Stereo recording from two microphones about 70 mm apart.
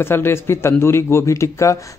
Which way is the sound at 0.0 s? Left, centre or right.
Left.